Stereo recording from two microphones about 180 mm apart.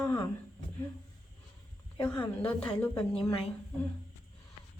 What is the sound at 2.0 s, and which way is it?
A woman's voice, 10° left (ahead or behind).